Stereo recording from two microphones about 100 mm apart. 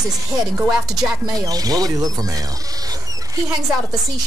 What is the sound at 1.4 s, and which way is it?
Speech, 40° right (ahead or behind).